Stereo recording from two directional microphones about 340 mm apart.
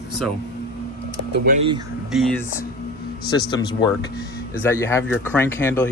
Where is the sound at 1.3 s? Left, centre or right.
Right.